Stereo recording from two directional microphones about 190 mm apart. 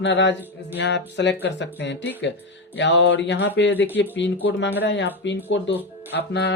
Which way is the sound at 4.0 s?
70° left (ahead or behind).